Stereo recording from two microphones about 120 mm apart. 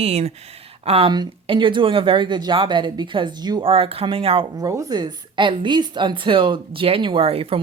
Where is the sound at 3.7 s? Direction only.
50° right (ahead or behind).